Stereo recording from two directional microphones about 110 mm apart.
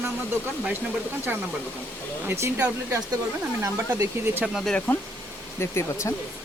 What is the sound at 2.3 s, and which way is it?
Speech, 25° right (ahead or behind).